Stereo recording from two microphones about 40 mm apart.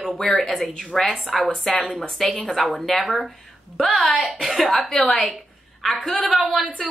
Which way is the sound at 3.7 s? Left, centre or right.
Centre.